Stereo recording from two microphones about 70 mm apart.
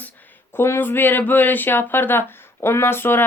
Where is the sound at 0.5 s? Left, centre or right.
Left.